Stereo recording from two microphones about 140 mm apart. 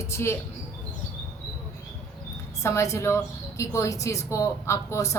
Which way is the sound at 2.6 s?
20° left (ahead or behind).